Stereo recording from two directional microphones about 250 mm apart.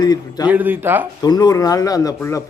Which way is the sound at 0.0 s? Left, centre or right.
Centre.